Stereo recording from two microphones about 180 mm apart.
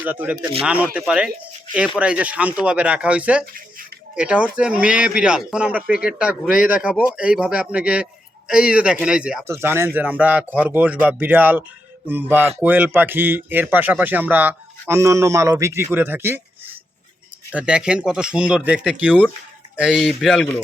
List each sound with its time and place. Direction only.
0.0 s speech: 10° right (ahead or behind)
3.4 s a sound: 50° right (ahead or behind)
4.1 s speech: 5° right (ahead or behind)
17.5 s speech: 5° right (ahead or behind)